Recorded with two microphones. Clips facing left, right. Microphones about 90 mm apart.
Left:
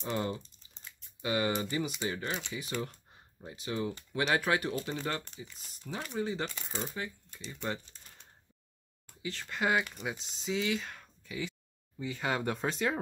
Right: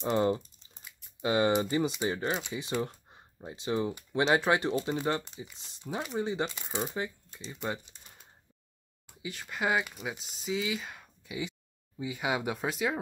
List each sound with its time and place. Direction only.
0.0 s speech: 30° right (ahead or behind)
0.4 s crumpling: 10° right (ahead or behind)
1.2 s speech: 25° right (ahead or behind)
6.9 s speech: 20° right (ahead or behind); by 13.0 s 5° right (ahead or behind)